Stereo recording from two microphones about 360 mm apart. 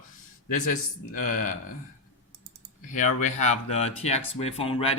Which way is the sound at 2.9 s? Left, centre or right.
Left.